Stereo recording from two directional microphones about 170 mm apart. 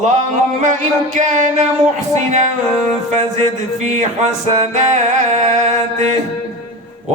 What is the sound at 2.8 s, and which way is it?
Music, 45° right (ahead or behind).